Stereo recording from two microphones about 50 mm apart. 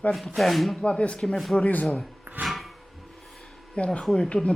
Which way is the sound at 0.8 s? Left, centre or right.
Left.